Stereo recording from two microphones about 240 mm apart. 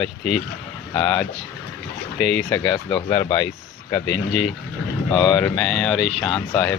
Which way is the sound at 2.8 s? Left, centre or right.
Left.